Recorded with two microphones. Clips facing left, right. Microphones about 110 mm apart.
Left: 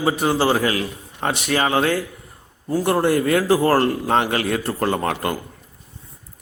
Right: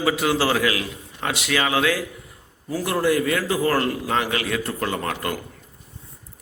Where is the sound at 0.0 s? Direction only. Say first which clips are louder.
Left 2 dB; 35° left (ahead or behind).